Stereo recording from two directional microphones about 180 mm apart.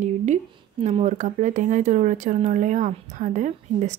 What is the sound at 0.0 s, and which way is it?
A woman's voice, 40° right (ahead or behind).